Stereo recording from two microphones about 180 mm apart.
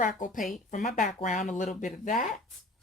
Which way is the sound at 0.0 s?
45° left (ahead or behind).